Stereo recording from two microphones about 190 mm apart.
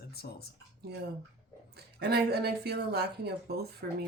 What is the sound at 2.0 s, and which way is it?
Speech, 55° right (ahead or behind).